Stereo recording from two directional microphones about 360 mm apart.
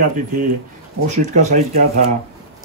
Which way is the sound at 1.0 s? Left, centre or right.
Centre.